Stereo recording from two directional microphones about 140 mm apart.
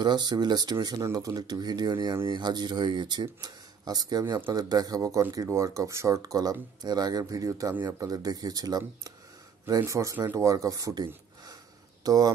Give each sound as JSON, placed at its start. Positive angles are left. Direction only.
{"t": 0.0, "sound": "speech", "side_deg": -30}